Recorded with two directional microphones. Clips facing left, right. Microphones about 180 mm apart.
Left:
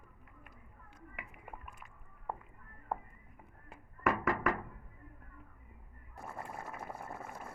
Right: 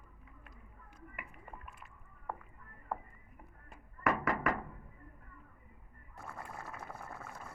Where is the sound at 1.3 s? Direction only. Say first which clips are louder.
Left 1 dB; 10° left (ahead or behind).